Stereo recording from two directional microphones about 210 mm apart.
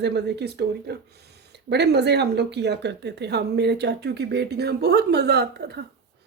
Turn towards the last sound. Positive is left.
turn(degrees=-50)  # may be behind; listen again after turning